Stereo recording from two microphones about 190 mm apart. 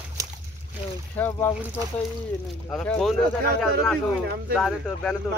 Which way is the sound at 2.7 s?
5° left (ahead or behind).